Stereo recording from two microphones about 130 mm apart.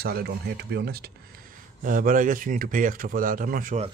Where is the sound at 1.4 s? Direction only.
90° right.